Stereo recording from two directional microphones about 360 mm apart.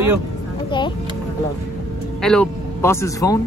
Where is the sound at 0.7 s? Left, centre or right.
Centre.